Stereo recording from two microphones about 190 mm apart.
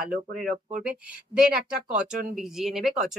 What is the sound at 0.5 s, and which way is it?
Speech, 45° right (ahead or behind).